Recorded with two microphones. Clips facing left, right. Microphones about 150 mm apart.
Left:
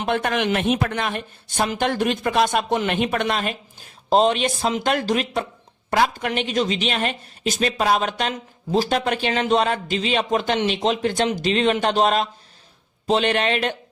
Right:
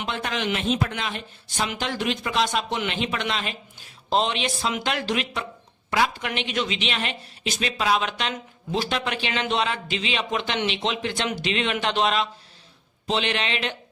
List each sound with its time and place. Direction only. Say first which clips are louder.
0.0 s a woman's voice: left 6 dB; 55° left (ahead or behind)